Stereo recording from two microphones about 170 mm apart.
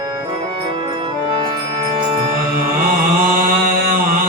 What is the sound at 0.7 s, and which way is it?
Music, 30° right (ahead or behind).